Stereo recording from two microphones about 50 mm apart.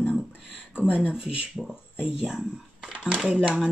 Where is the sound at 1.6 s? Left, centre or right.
Centre.